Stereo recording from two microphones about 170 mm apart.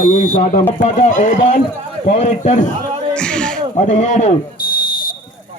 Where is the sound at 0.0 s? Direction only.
50° left (ahead or behind).